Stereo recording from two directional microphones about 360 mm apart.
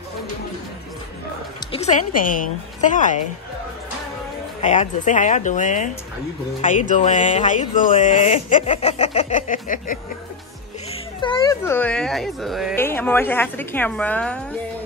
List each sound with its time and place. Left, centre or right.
1.6 s speech: centre
4.6 s speech: centre
6.9 s speech: centre